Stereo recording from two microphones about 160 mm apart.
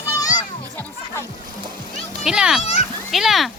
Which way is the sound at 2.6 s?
40° left (ahead or behind).